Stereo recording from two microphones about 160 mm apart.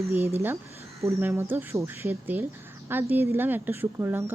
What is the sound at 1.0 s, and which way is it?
Speech, 15° right (ahead or behind).